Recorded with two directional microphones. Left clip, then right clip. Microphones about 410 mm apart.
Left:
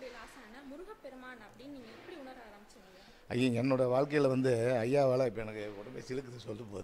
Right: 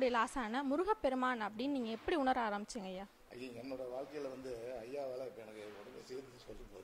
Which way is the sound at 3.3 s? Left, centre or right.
Left.